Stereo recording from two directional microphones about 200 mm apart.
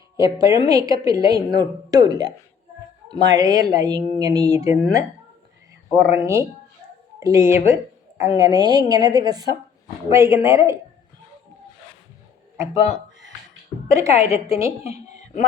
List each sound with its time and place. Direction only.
0.2 s a woman's voice: 15° right (ahead or behind)
5.9 s a woman's voice: 15° right (ahead or behind)
12.7 s speech: 30° left (ahead or behind)
13.9 s a woman's voice: 15° right (ahead or behind)
14.8 s a sound: 35° left (ahead or behind)